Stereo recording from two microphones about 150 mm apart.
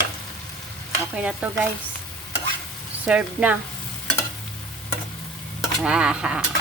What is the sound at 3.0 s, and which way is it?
Stir, 5° right (ahead or behind).